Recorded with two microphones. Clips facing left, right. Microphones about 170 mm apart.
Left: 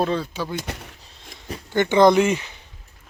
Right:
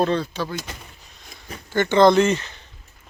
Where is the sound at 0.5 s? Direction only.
65° left (ahead or behind).